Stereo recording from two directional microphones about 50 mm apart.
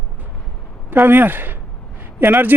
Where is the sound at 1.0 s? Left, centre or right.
Right.